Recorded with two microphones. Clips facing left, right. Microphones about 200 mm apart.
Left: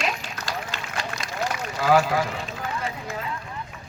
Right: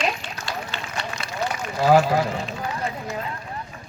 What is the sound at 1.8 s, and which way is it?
Speech, 30° right (ahead or behind).